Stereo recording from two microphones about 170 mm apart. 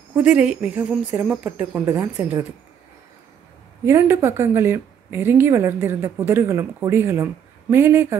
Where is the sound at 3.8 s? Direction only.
15° right (ahead or behind).